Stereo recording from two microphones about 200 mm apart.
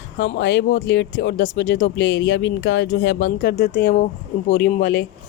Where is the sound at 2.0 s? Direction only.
75° left (ahead or behind).